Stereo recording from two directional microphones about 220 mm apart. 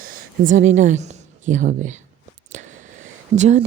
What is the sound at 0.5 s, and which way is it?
A woman's voice, 35° right (ahead or behind).